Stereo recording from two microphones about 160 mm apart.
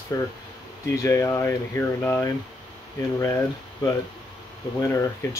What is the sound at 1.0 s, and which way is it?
Speech, 15° left (ahead or behind).